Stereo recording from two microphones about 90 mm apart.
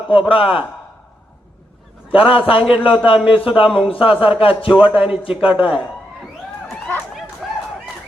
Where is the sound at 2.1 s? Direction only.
80° left.